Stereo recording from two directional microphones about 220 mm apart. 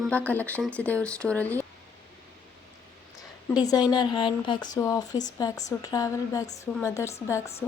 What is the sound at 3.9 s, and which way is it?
Speech, 20° left (ahead or behind).